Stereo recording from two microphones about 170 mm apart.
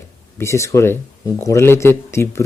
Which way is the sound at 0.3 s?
15° left (ahead or behind).